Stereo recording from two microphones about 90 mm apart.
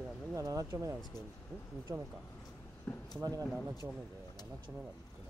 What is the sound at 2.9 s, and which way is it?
Speech, 20° left (ahead or behind).